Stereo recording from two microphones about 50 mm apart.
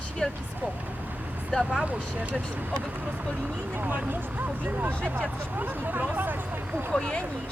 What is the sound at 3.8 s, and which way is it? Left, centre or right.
Speech, right.